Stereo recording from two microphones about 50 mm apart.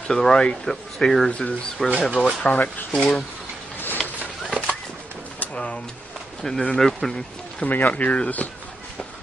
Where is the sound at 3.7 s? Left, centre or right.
Left.